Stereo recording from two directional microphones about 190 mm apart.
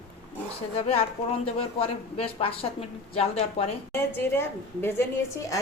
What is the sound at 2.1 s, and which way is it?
A woman's voice, 30° left (ahead or behind).